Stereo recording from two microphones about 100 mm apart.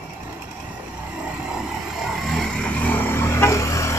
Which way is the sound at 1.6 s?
Centre (ahead or behind).